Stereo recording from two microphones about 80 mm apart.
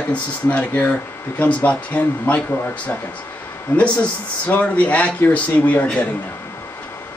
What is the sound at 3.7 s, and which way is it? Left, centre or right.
Speech, centre.